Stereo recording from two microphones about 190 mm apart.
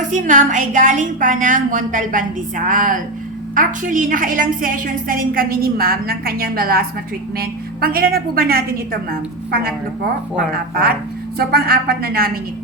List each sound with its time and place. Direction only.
0.0 s a woman's voice: 40° right (ahead or behind)